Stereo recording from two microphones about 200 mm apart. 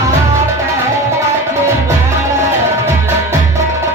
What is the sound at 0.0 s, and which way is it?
Music, 15° right (ahead or behind).